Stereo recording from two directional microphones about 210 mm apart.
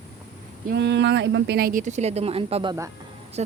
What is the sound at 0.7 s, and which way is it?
Speech, 55° right (ahead or behind).